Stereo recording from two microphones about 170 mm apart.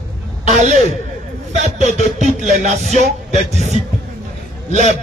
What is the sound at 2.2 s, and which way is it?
Speech, 45° right (ahead or behind).